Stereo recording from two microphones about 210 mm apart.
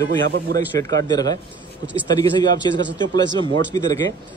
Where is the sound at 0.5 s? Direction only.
20° left (ahead or behind).